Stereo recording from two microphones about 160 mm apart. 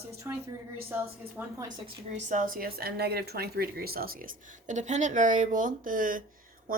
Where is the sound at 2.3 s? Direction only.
60° right (ahead or behind).